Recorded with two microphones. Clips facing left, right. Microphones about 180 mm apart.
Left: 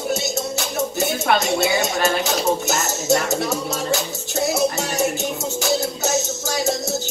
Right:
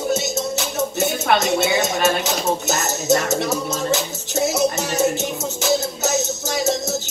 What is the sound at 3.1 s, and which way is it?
Music, 20° right (ahead or behind).